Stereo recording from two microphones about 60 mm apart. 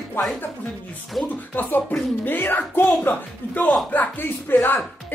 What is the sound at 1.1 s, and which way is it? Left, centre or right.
Speech, centre.